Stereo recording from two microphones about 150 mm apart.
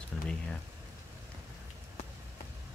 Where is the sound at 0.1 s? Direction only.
5° left (ahead or behind).